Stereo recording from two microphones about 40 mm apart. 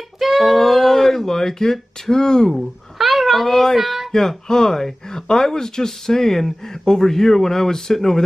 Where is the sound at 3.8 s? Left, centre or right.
Centre.